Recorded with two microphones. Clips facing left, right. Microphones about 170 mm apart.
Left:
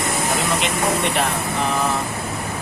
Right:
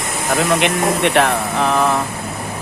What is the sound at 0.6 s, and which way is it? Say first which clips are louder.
Speech: right 4 dB; 70° right (ahead or behind).